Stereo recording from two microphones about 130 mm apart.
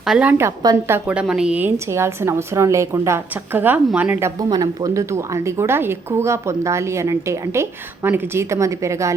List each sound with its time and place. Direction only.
0.0 s a woman's voice: 5° right (ahead or behind)
4.4 s a woman's voice: 30° right (ahead or behind)